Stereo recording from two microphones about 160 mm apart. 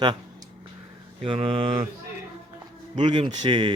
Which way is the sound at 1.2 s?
35° right (ahead or behind).